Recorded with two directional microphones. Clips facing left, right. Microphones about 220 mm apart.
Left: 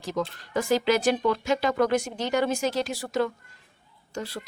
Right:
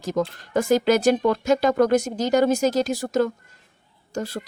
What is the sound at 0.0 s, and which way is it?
A woman's voice, 45° right (ahead or behind).